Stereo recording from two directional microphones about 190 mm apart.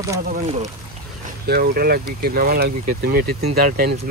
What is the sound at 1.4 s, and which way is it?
Speech, 55° right (ahead or behind).